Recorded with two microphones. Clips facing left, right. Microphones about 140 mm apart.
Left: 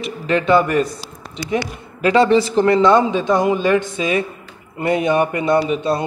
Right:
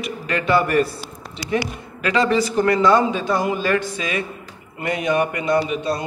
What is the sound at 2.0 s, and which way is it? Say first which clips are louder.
A man's voice: left 5 dB; 30° left (ahead or behind).